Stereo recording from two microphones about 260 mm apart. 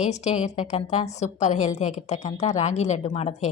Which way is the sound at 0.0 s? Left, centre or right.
Left.